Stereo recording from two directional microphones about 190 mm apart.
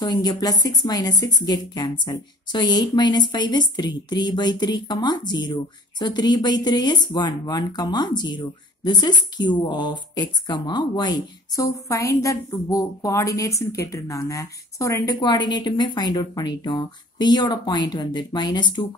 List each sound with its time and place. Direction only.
0.0 s speech: 20° left (ahead or behind)